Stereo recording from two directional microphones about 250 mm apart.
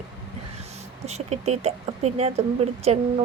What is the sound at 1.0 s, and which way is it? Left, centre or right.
Speech, right.